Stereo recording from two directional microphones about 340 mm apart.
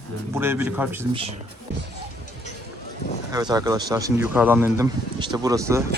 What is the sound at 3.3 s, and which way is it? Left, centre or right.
Speech, centre.